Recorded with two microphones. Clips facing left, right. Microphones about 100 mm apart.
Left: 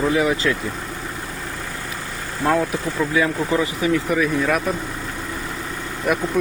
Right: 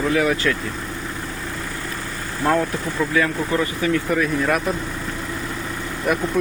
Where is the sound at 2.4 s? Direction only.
5° left (ahead or behind).